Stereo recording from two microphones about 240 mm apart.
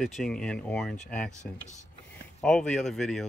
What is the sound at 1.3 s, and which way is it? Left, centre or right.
Speech, left.